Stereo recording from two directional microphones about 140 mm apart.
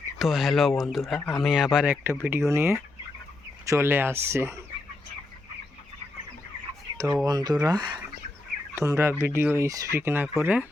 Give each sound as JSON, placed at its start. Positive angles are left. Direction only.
{"t": 0.2, "sound": "speech", "side_deg": 0}
{"t": 6.9, "sound": "speech", "side_deg": -25}
{"t": 8.7, "sound": "speech", "side_deg": -20}